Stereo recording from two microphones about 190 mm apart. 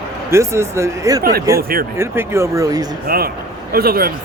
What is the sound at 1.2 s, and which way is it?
Speech, 50° right (ahead or behind).